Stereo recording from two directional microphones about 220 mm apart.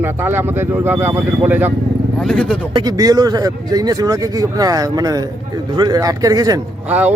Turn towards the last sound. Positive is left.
turn(degrees=-5)  # may be behind; listen again after turning